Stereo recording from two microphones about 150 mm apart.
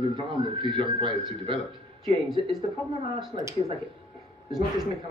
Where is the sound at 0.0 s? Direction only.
35° right (ahead or behind).